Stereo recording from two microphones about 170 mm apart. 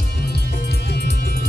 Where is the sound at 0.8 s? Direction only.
75° left (ahead or behind).